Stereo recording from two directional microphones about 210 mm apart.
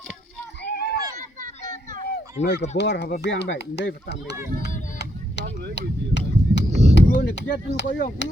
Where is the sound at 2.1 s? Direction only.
50° left (ahead or behind).